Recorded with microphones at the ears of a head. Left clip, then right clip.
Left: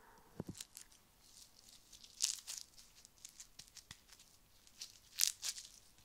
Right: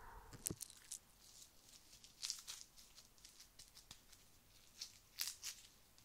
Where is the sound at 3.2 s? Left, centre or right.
Left.